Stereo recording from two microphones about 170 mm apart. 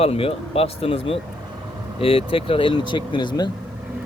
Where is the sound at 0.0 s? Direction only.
35° left (ahead or behind).